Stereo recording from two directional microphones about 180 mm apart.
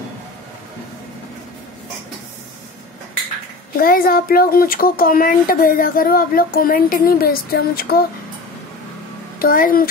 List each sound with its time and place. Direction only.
3.7 s speech: 55° left (ahead or behind)
9.4 s speech: 50° left (ahead or behind)